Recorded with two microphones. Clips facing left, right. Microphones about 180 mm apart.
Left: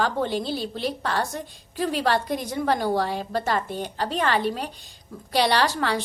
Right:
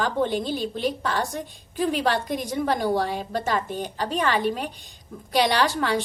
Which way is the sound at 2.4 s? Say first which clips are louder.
Even; 45° right (ahead or behind).